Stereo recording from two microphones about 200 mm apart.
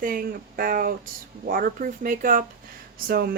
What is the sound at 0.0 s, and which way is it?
Speech, 45° right (ahead or behind).